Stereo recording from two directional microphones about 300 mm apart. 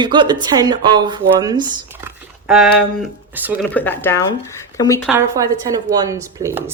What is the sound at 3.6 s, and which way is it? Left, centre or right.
Speech, centre.